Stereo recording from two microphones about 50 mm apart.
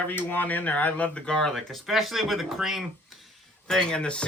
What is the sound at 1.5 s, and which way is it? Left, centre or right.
Speech, centre.